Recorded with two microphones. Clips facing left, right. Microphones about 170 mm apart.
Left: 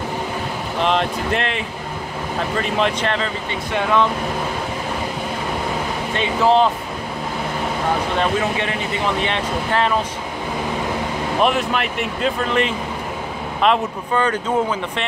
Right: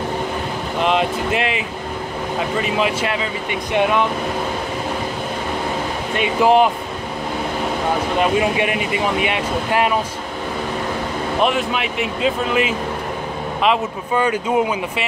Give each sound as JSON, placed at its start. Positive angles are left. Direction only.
{"t": 0.7, "sound": "speech", "side_deg": -5}
{"t": 3.7, "sound": "speech", "side_deg": -20}
{"t": 6.1, "sound": "speech", "side_deg": -15}
{"t": 8.2, "sound": "speech", "side_deg": -15}
{"t": 11.4, "sound": "speech", "side_deg": 0}